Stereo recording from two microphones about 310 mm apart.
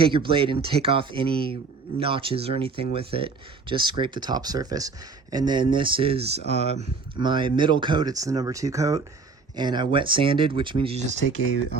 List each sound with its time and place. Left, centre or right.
0.0 s speech: centre